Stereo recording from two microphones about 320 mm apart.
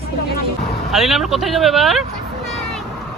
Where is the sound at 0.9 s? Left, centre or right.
Centre.